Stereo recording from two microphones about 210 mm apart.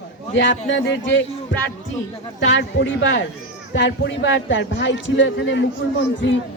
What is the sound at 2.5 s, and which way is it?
Speech, 60° left (ahead or behind).